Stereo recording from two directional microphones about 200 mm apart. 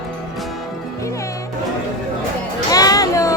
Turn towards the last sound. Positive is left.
turn(degrees=15)  # may be behind; listen again after turning